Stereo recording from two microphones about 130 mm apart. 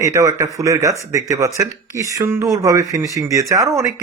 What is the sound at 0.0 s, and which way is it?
Speech, 25° right (ahead or behind).